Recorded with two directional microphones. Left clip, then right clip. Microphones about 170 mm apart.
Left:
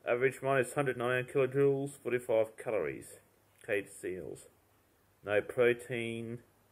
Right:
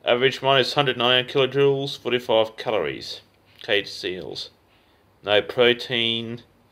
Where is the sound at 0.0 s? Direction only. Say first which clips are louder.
Right 12 dB; 5° left (ahead or behind).